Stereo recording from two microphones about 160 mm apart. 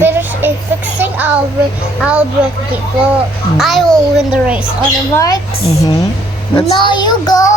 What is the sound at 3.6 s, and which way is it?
A child's voice, centre (ahead or behind).